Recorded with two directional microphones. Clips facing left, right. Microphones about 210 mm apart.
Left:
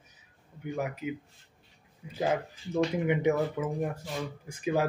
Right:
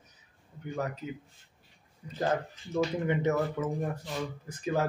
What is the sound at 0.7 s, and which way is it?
Speech, 10° left (ahead or behind).